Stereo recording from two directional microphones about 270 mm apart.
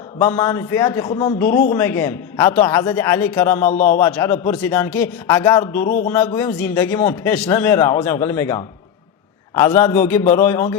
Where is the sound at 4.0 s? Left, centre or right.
Centre.